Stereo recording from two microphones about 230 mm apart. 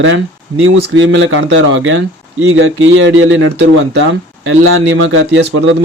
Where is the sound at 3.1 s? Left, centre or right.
Right.